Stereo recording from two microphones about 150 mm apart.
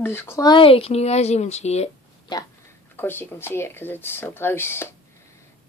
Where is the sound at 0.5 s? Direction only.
35° left (ahead or behind).